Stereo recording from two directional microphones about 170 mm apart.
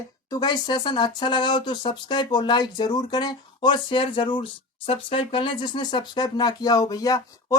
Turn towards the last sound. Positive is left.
turn(degrees=20)  # may be behind; listen again after turning